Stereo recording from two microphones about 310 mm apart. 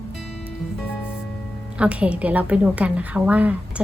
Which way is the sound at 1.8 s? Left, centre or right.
Centre.